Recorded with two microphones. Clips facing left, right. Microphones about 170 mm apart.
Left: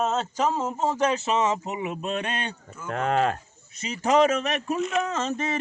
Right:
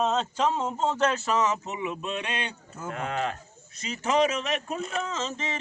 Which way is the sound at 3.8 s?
35° left (ahead or behind).